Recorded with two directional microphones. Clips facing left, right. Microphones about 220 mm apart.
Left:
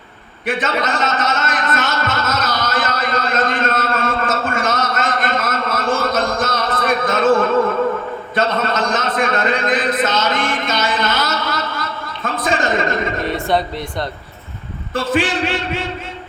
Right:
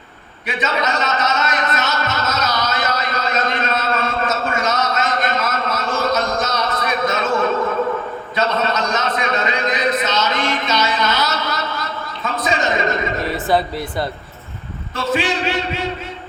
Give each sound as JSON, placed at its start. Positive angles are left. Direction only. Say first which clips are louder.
{"t": 0.4, "sound": "a sound", "louder": "left 2 dB", "side_deg": 50}
{"t": 13.2, "sound": "speech", "louder": "right 2 dB", "side_deg": 0}
{"t": 14.9, "sound": "a man's voice", "louder": "left 2 dB", "side_deg": 50}